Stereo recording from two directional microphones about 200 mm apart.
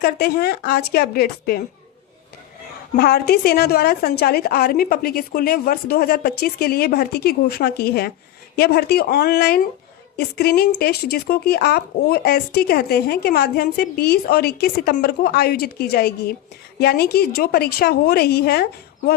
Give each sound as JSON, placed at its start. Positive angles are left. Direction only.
{"t": 0.0, "sound": "speech", "side_deg": 50}
{"t": 2.9, "sound": "speech", "side_deg": 50}